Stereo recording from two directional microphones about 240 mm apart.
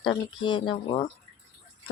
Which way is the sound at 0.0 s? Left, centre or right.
Centre.